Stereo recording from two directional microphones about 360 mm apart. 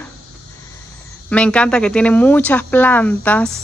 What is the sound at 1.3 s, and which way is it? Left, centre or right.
Speech, centre.